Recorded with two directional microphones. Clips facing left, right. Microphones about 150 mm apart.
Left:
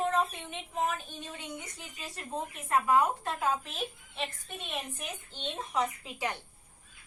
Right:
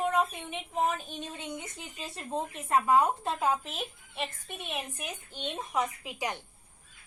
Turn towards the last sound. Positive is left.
turn(degrees=-15)  # may be behind; listen again after turning